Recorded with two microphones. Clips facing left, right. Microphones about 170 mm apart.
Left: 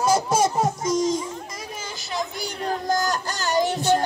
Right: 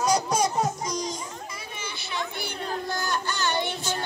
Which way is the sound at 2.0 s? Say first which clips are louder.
Left 4 dB; 40° left (ahead or behind).